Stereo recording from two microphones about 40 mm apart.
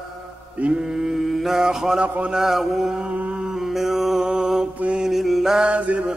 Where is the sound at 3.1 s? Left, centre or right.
Right.